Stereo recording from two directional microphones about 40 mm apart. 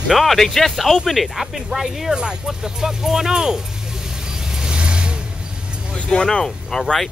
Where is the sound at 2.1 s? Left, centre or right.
Right.